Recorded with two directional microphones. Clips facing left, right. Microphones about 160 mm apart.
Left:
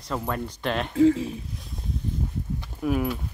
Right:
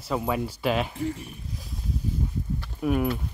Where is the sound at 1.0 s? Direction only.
90° left.